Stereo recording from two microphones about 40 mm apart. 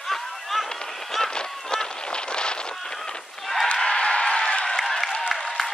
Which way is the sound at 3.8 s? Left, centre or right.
Left.